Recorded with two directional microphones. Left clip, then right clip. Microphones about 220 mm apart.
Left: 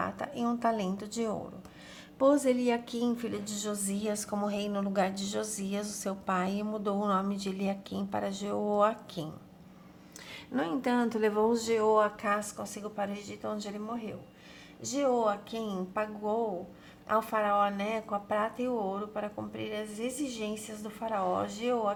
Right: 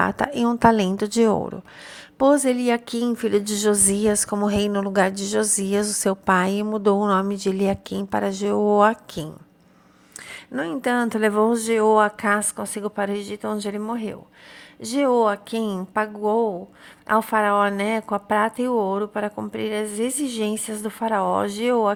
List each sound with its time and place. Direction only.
0.0 s a woman's voice: 40° right (ahead or behind)
10.5 s a woman's voice: 30° right (ahead or behind)